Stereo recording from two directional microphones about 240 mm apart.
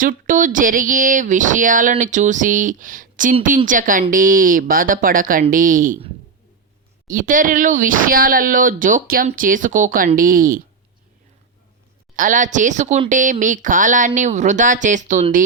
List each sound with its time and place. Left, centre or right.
0.0 s speech: right
7.1 s speech: right
12.1 s speech: right